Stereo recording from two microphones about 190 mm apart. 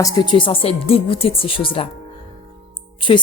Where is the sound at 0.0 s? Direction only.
25° left (ahead or behind).